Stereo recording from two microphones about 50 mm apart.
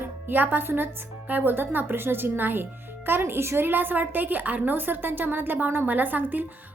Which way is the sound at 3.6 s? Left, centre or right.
Right.